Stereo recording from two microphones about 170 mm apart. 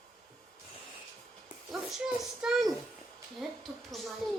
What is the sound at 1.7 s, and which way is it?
A child's voice, centre (ahead or behind).